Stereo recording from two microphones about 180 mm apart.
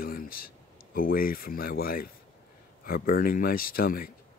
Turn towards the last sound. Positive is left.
turn(degrees=55)  # may be behind; listen again after turning